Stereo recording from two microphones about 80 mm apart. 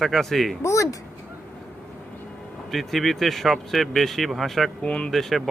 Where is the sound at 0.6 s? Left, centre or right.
Left.